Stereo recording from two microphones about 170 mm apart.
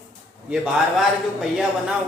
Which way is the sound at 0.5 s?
10° right (ahead or behind).